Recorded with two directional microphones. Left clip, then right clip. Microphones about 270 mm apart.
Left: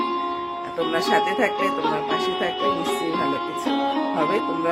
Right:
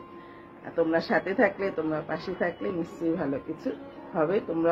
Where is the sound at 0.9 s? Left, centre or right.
Centre.